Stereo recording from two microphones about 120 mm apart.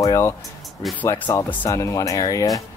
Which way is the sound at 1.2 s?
15° left (ahead or behind).